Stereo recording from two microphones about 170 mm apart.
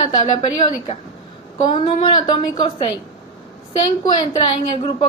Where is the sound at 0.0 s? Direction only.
25° left (ahead or behind).